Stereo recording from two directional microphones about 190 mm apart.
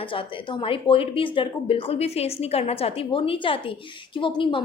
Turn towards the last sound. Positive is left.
turn(degrees=25)  # may be behind; listen again after turning